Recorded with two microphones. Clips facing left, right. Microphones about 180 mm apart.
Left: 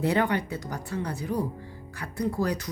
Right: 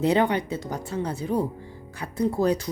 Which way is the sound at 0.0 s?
20° right (ahead or behind).